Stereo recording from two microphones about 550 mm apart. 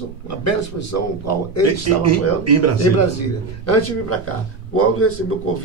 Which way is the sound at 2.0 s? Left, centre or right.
Right.